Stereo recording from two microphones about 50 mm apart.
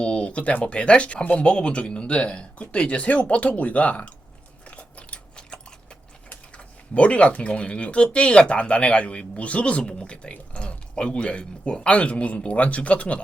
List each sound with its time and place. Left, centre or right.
0.0 s speech: left
4.6 s biting: left
6.6 s speech: left